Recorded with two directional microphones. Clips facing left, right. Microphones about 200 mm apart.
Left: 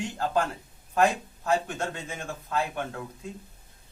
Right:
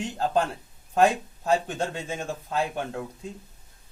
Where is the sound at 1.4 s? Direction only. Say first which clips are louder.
Right 2 dB; 30° right (ahead or behind).